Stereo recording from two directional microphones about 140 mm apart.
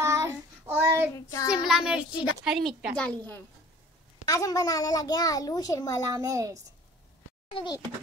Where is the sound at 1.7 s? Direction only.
5° right (ahead or behind).